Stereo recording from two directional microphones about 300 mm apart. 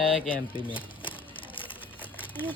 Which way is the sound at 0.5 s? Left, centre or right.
Centre.